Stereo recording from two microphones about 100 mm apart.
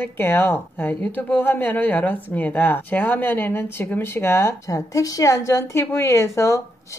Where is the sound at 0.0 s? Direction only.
20° left (ahead or behind).